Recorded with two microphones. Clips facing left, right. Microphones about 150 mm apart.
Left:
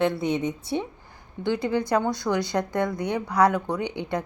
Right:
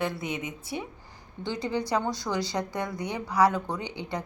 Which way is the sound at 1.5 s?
55° left (ahead or behind).